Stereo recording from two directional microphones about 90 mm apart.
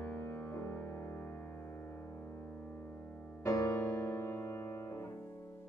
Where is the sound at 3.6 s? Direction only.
25° left (ahead or behind).